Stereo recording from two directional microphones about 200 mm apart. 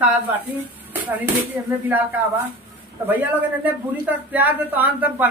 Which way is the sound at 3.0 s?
10° right (ahead or behind).